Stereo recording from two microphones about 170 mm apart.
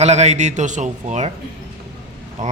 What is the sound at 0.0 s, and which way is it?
Speech, 40° right (ahead or behind).